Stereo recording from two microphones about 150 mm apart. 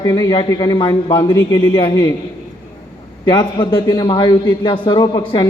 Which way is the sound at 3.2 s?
30° left (ahead or behind).